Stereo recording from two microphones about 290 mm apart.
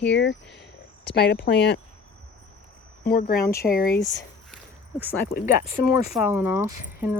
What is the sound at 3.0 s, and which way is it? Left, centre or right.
Speech, left.